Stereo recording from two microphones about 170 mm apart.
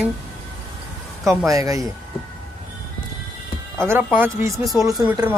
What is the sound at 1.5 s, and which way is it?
Speech, 20° right (ahead or behind).